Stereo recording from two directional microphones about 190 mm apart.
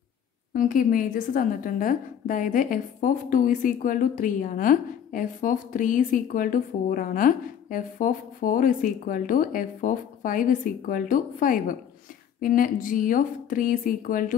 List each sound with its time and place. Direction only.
0.5 s a woman's voice: 45° left (ahead or behind)